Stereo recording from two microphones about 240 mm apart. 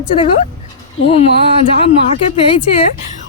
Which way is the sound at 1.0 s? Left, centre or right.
Left.